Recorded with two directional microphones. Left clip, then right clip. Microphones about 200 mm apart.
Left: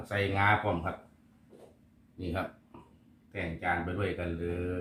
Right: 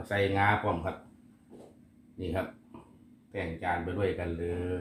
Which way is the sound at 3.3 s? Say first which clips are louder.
Even; 15° right (ahead or behind).